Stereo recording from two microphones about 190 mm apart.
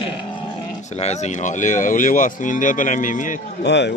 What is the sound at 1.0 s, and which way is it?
Speech, 35° left (ahead or behind).